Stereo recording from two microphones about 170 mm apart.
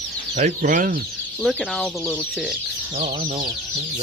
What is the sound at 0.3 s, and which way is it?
Speech, 45° right (ahead or behind).